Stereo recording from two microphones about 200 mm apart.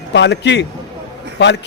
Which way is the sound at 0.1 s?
60° left (ahead or behind).